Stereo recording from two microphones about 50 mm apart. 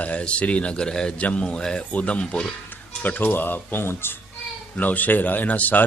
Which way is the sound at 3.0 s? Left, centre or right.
Left.